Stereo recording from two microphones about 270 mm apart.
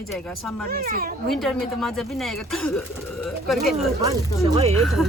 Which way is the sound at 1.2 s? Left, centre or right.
Centre.